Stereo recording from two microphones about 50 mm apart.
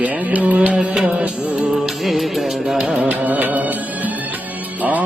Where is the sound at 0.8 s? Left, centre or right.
Centre.